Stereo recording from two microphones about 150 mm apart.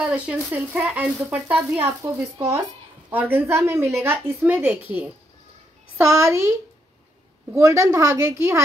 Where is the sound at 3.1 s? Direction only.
15° right (ahead or behind).